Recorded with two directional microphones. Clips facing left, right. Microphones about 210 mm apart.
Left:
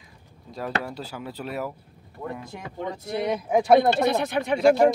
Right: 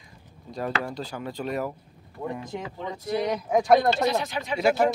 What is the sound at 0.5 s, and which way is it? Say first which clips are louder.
Speech: even; centre (ahead or behind).